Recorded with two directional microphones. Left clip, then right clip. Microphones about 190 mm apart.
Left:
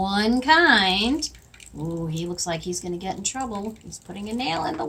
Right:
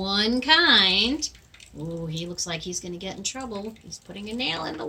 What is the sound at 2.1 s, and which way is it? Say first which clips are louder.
Speech: left 3 dB; 15° left (ahead or behind).